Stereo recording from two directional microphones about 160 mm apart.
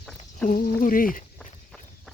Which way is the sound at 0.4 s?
60° left (ahead or behind).